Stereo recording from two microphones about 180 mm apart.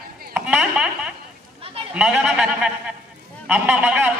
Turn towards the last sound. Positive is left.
turn(degrees=-5)  # may be behind; listen again after turning